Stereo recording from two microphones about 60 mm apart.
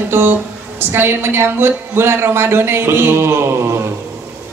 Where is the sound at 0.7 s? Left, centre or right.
Right.